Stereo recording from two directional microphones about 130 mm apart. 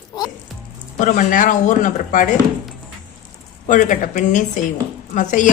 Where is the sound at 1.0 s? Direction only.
75° left (ahead or behind).